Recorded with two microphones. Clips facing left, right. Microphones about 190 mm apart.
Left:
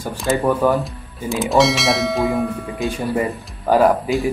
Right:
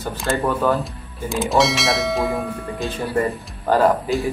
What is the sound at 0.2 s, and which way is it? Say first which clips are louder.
Speech: left 4 dB; 5° left (ahead or behind).